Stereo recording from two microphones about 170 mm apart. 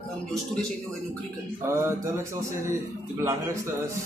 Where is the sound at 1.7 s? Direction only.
15° right (ahead or behind).